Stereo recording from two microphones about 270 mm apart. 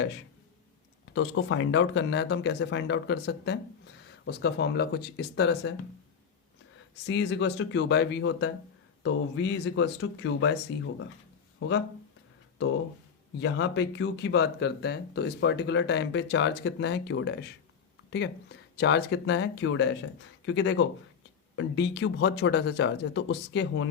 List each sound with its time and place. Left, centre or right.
1.1 s speech: left
7.1 s speech: left
13.4 s speech: left